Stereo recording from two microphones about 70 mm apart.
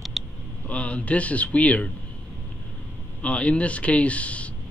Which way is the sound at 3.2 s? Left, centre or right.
Centre.